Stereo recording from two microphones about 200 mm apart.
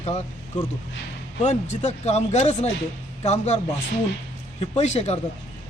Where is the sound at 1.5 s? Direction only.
35° left (ahead or behind).